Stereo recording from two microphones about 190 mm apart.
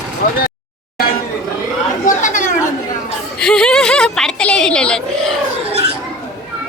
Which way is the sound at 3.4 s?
5° left (ahead or behind).